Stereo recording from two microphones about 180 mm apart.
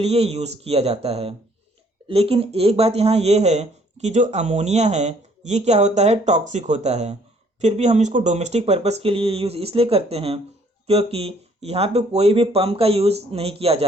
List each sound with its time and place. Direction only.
0.0 s speech: 35° right (ahead or behind)